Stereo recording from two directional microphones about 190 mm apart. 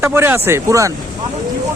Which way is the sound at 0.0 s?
10° right (ahead or behind).